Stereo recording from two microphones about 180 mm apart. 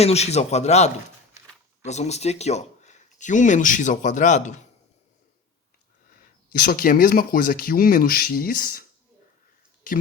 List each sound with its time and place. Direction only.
0.0 s a man's voice: 35° left (ahead or behind)
6.5 s speech: 55° left (ahead or behind)